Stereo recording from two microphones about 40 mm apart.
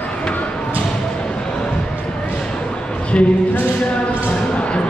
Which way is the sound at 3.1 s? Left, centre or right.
Left.